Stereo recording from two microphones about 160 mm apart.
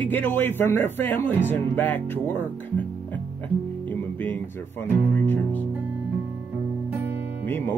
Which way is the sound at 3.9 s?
10° left (ahead or behind).